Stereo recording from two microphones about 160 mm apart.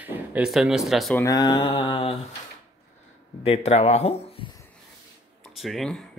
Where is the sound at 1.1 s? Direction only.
20° left (ahead or behind).